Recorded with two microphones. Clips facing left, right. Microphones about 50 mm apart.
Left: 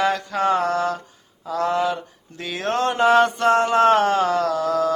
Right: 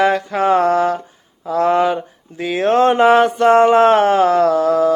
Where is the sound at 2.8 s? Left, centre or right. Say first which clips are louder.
Right 6 dB; right.